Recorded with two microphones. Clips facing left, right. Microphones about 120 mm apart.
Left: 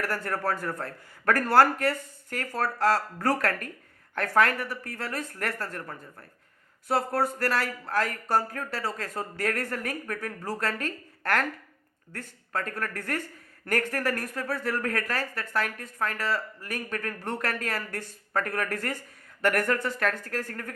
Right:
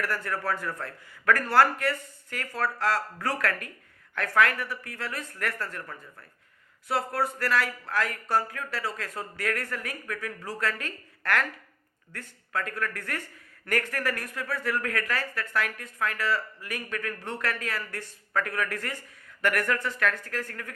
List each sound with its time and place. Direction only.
0.0 s speech: 40° left (ahead or behind)